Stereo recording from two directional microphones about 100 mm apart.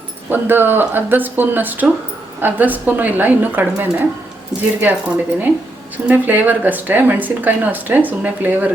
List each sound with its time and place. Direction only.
0.3 s speech: 20° right (ahead or behind)